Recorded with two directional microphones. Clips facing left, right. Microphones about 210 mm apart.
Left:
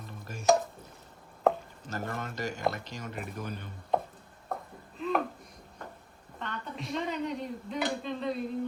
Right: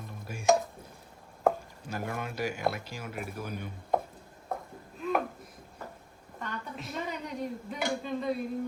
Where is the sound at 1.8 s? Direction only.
10° right (ahead or behind).